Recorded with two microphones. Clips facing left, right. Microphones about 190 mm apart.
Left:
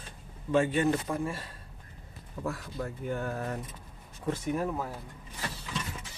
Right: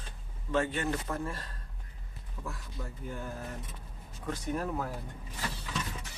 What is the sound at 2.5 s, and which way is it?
Speech, 65° left (ahead or behind).